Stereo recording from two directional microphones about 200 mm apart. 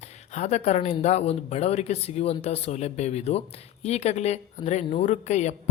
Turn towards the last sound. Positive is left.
turn(degrees=35)  # may be behind; listen again after turning